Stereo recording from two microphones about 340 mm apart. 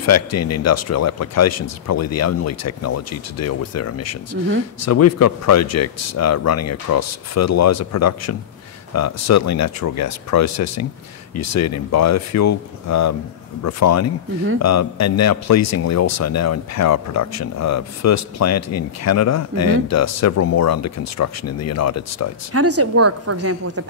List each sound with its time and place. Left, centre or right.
0.0 s a man's voice: left
22.5 s a woman's voice: right